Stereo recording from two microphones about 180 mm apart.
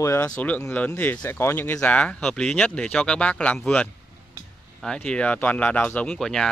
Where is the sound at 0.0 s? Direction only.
15° left (ahead or behind).